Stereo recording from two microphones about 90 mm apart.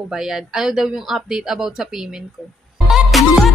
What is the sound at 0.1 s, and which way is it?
Speech, 5° right (ahead or behind).